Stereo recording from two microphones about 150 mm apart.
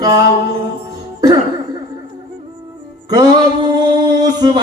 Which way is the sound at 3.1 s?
25° right (ahead or behind).